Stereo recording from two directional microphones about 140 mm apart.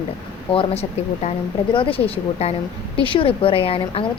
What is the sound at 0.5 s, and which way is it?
A woman's voice, 45° left (ahead or behind).